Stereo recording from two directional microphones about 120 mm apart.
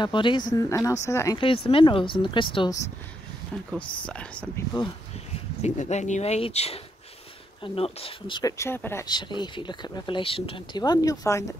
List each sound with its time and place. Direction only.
0.0 s speech: 40° left (ahead or behind); by 1.4 s 25° left (ahead or behind)
1.4 s speech: 50° left (ahead or behind)
3.5 s speech: 5° left (ahead or behind)
5.6 s speech: 70° left (ahead or behind); by 8.4 s 50° left (ahead or behind)
8.4 s speech: 25° left (ahead or behind)
9.0 s speech: 40° left (ahead or behind)
10.8 s speech: 30° left (ahead or behind)